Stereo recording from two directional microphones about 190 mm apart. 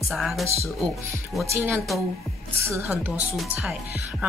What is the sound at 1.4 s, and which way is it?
Speech, 15° right (ahead or behind).